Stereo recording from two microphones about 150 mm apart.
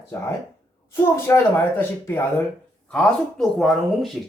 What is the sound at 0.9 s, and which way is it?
A woman's voice, 15° left (ahead or behind).